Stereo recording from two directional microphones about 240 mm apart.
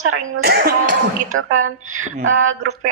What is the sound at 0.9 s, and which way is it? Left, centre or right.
Speech, right.